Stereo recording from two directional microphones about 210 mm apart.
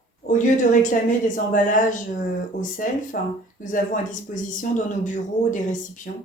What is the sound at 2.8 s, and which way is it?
Speech, 40° left (ahead or behind).